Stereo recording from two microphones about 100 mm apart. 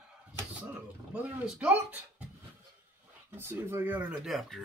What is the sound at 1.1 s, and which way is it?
Speech, 15° right (ahead or behind).